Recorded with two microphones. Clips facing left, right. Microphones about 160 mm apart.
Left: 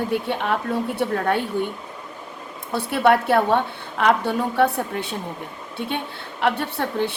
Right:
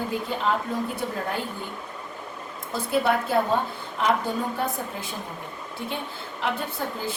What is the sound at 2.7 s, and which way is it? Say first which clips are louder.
Speech: left 5 dB; 70° left (ahead or behind).